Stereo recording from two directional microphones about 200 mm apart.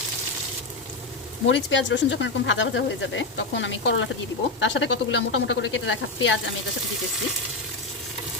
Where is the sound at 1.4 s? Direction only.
65° left (ahead or behind).